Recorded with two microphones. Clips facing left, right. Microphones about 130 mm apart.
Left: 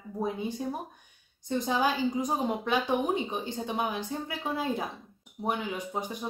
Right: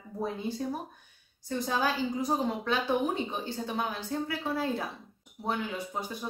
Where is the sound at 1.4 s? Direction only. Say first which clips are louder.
Left 2 dB; 20° left (ahead or behind).